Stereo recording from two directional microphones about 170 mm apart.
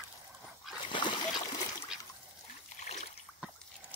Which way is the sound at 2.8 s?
40° left (ahead or behind).